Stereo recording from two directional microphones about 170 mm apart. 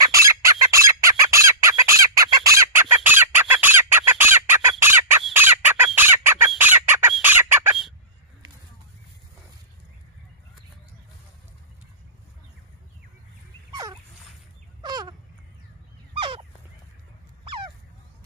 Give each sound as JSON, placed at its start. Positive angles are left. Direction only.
{"t": 0.0, "sound": "chicken", "side_deg": -15}
{"t": 14.8, "sound": "a sound", "side_deg": -25}
{"t": 16.2, "sound": "fowl", "side_deg": -30}